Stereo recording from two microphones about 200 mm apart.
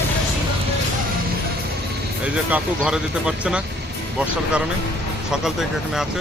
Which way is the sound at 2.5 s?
5° right (ahead or behind).